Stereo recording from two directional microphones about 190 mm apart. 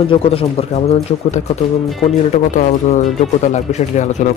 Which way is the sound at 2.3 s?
40° left (ahead or behind).